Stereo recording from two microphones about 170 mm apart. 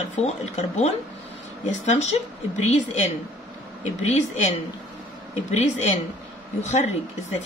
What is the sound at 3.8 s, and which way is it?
A woman's voice, 40° left (ahead or behind).